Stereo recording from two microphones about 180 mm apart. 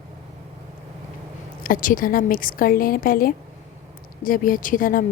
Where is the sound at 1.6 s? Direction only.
50° left (ahead or behind).